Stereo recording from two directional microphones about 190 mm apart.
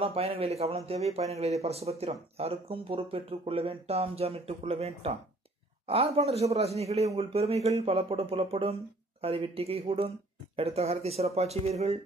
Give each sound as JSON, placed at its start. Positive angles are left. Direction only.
{"t": 0.0, "sound": "speech", "side_deg": -30}